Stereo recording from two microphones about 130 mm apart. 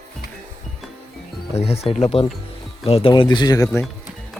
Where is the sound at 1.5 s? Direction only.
50° left (ahead or behind); by 3.7 s 30° left (ahead or behind).